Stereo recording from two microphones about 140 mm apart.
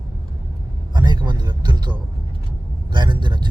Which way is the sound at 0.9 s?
30° right (ahead or behind).